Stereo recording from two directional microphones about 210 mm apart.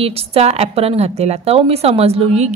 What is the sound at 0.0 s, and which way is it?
A woman's voice, 30° right (ahead or behind).